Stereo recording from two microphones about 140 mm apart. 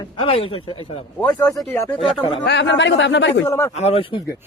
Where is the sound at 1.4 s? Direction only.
15° left (ahead or behind).